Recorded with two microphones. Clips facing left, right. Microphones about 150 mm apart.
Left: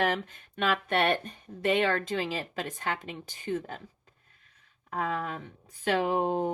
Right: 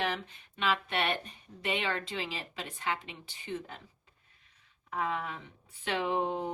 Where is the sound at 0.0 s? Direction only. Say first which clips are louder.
Left 6 dB; 50° left (ahead or behind).